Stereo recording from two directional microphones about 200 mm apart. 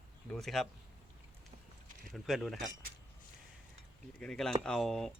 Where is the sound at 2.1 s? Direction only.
Centre (ahead or behind).